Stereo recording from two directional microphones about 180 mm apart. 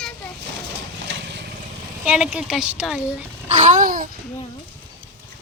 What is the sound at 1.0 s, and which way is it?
Vehicle, 85° right.